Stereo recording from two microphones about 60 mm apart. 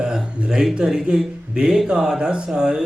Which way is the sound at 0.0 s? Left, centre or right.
Centre.